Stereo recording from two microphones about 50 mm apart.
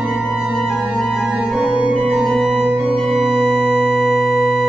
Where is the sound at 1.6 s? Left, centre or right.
Centre.